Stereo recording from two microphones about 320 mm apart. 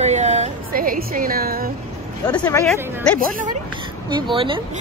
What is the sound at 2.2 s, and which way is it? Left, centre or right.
Speech, centre.